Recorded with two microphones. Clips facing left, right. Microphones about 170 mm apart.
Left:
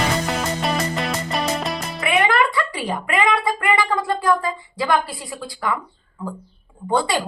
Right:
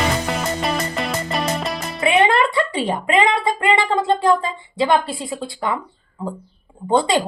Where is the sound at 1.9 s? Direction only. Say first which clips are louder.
Right 3 dB; 25° right (ahead or behind).